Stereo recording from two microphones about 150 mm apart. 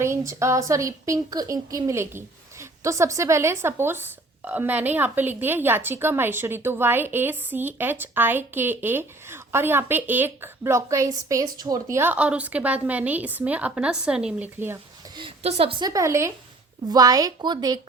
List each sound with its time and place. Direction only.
0.0 s speech: 20° right (ahead or behind)
15.4 s a woman's voice: 40° right (ahead or behind)
15.8 s speech: 20° right (ahead or behind)